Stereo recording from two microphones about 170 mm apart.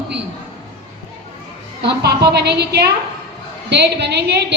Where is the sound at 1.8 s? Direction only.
75° right (ahead or behind).